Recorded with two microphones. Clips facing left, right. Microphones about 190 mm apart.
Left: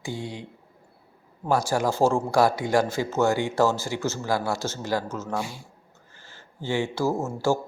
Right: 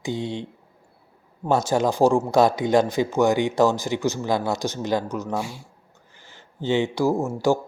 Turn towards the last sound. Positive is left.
turn(degrees=-15)  # may be behind; listen again after turning